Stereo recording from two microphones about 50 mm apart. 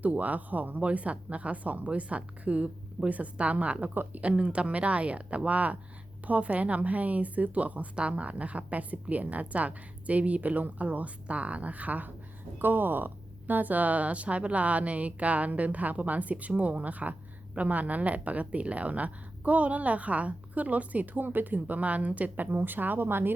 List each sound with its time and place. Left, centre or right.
0.0 s a woman's voice: right
4.3 s a woman's voice: right